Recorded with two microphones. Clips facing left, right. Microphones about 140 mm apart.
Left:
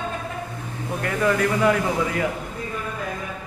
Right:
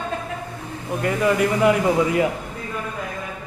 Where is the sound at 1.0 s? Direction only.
10° right (ahead or behind).